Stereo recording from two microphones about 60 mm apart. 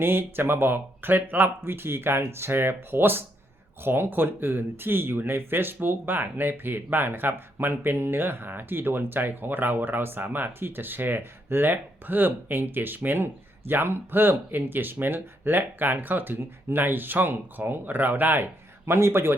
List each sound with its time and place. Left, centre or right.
0.0 s speech: right
18.9 s a man's voice: right